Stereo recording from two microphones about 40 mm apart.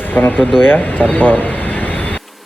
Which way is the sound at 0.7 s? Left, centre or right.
Left.